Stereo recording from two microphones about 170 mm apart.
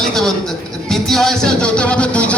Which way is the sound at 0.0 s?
Centre (ahead or behind).